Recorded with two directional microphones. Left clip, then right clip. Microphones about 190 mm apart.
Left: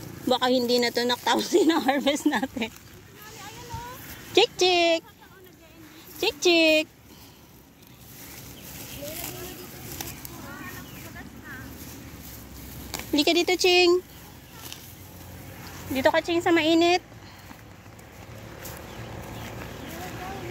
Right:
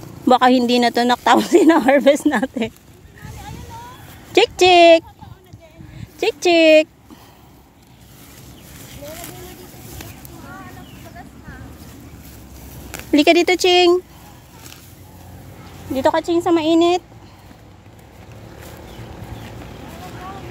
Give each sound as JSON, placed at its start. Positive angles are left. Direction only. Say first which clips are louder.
{"t": 0.3, "sound": "speech", "louder": "right 9 dB", "side_deg": -55}
{"t": 4.3, "sound": "speech", "louder": "right 8 dB", "side_deg": -55}
{"t": 6.1, "sound": "speech", "louder": "right 6 dB", "side_deg": -55}
{"t": 13.1, "sound": "speech", "louder": "right 9 dB", "side_deg": -55}
{"t": 15.9, "sound": "speech", "louder": "right 5 dB", "side_deg": -40}